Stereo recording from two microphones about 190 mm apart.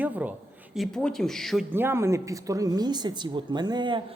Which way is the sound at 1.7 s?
10° right (ahead or behind).